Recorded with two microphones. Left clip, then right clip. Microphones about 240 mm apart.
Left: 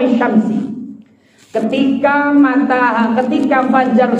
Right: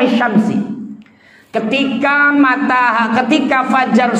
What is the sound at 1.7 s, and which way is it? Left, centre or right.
A man's voice, right.